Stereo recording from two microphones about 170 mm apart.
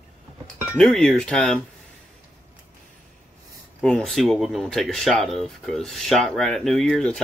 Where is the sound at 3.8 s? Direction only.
5° left (ahead or behind).